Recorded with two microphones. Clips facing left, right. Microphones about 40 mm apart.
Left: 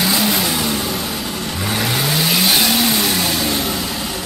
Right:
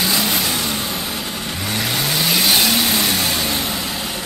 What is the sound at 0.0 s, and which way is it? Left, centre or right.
Vehicle, centre.